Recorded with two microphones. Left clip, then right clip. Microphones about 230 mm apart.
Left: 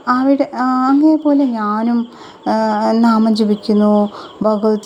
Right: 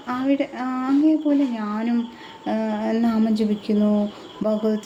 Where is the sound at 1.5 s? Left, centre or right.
Centre.